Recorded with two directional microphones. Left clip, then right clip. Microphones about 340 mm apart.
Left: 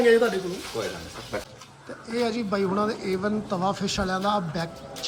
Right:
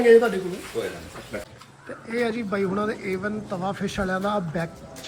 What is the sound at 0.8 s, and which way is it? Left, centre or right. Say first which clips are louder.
Speech: right 2 dB; centre.